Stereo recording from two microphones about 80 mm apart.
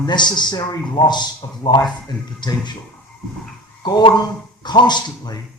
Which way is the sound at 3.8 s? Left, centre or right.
Left.